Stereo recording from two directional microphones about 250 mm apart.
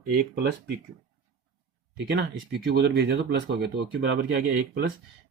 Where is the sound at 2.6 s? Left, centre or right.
Right.